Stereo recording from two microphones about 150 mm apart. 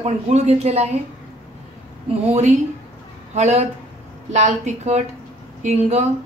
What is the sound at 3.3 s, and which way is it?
A woman's voice, 45° right (ahead or behind).